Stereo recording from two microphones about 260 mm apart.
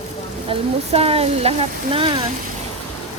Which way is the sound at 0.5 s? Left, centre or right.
Right.